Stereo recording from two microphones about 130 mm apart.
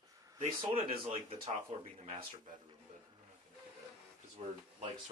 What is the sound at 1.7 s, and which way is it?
Speech, 55° right (ahead or behind).